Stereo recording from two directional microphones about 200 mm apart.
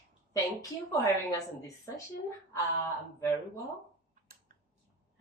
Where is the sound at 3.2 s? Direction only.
15° left (ahead or behind).